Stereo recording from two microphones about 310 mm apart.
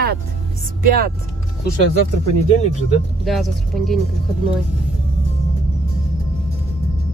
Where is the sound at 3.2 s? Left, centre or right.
Centre.